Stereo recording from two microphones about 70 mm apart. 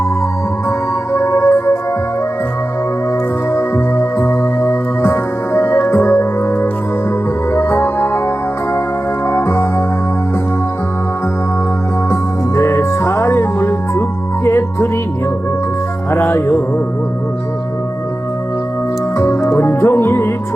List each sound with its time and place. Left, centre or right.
1.1 s music: left
3.5 s music: left
9.2 s music: left
12.1 s music: left
16.1 s music: left
19.1 s music: left